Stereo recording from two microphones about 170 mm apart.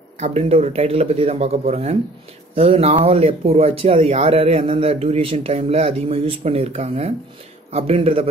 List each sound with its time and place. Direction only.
0.2 s speech: 35° right (ahead or behind)